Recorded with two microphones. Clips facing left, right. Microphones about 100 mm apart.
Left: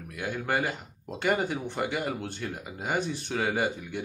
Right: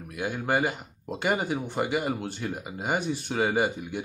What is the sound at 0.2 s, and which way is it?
Speech, 20° right (ahead or behind).